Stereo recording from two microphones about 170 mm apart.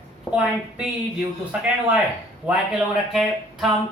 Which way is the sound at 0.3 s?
5° right (ahead or behind).